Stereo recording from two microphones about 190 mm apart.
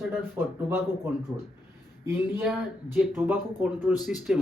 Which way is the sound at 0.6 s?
10° right (ahead or behind).